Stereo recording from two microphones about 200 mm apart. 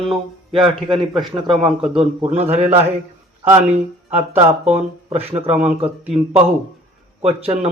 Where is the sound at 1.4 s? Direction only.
25° right (ahead or behind).